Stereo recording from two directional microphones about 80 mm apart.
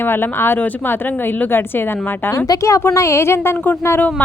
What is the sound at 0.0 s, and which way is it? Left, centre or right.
Speech, left.